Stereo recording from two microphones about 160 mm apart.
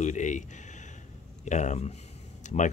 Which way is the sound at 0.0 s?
50° left (ahead or behind).